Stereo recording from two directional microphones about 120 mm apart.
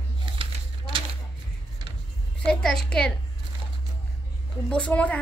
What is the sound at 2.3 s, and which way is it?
Speech, 5° left (ahead or behind).